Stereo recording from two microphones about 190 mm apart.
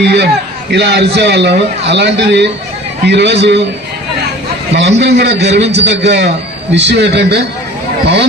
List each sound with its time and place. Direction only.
0.0 s a man's voice: 65° right (ahead or behind)
4.7 s a man's voice: 65° right (ahead or behind)